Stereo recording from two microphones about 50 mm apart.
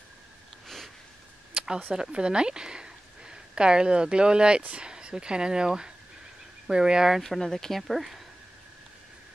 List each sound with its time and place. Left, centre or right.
1.5 s a sound: centre
1.9 s speech: centre
7.2 s speech: centre